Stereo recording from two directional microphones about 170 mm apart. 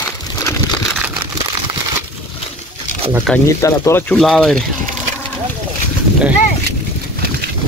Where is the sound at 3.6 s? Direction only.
15° left (ahead or behind).